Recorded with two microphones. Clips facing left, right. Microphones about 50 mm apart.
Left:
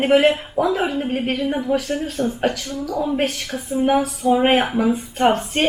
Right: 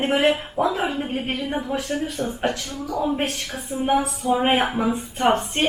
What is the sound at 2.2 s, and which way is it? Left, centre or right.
Speech, centre.